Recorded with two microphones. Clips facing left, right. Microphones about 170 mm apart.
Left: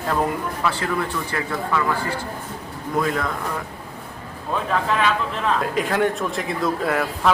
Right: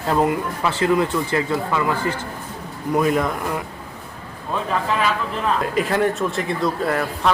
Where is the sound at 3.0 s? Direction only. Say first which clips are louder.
Right 4 dB; 20° right (ahead or behind).